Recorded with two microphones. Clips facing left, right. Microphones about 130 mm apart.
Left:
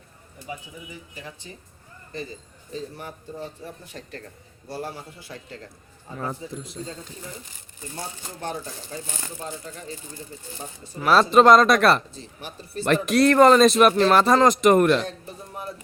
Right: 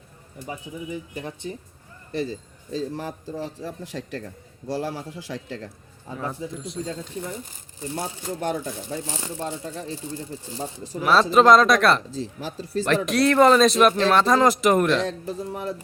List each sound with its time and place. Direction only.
1.1 s speech: 55° right (ahead or behind)
2.7 s speech: 90° right
9.1 s speech: 25° right (ahead or behind)
11.0 s speech: centre (ahead or behind)
12.1 s speech: 90° right
12.8 s speech: centre (ahead or behind)
15.0 s speech: 90° right